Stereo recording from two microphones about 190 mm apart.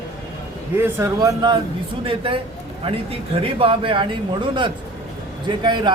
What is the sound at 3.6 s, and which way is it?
A man's voice, 25° right (ahead or behind).